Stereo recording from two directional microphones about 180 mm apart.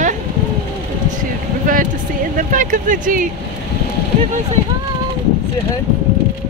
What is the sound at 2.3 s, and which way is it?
Speech, 50° right (ahead or behind).